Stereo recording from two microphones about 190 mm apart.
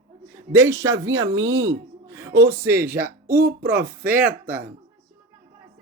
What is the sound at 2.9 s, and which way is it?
Speech, 55° right (ahead or behind).